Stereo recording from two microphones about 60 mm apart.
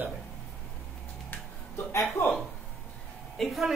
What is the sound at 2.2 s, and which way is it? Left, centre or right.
Speech, left.